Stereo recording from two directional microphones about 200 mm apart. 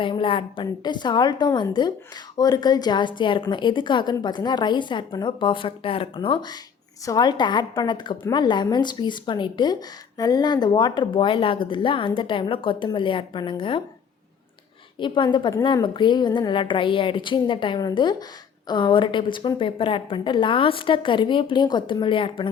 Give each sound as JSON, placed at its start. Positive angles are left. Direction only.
{"t": 0.0, "sound": "a woman's voice", "side_deg": 25}
{"t": 14.9, "sound": "a woman's voice", "side_deg": 25}